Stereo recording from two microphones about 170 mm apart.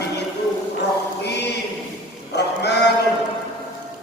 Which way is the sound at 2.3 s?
85° left.